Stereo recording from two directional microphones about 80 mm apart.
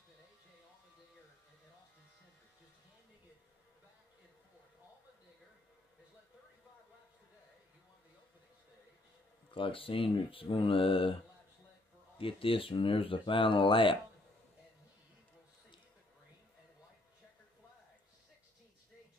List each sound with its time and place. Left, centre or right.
9.5 s speech: left
12.3 s speech: left